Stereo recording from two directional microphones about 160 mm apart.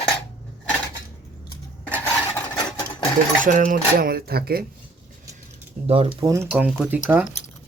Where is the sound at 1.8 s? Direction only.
10° left (ahead or behind).